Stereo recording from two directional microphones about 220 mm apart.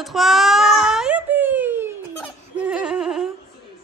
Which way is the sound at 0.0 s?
Centre (ahead or behind).